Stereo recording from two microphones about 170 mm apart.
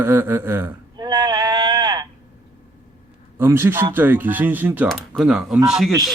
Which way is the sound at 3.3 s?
15° right (ahead or behind).